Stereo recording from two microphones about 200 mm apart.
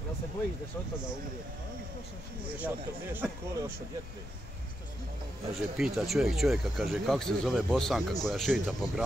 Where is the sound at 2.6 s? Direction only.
10° right (ahead or behind).